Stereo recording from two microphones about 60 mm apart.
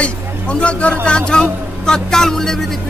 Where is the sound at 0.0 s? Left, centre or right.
Centre.